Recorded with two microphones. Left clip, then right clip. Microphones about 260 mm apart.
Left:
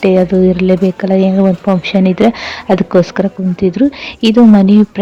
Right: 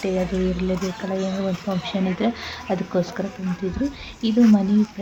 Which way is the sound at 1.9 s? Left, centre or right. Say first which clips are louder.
Left 13 dB; left.